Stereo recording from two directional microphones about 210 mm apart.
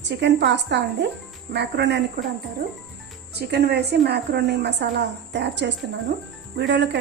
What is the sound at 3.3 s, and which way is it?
A woman's voice, 50° right (ahead or behind).